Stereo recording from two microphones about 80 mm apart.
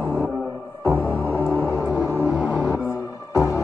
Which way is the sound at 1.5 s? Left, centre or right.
Right.